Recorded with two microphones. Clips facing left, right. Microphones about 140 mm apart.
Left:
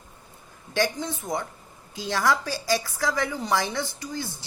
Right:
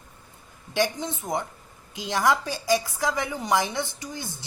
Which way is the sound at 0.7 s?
20° right (ahead or behind).